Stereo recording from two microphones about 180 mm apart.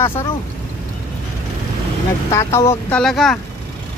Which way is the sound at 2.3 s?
15° left (ahead or behind).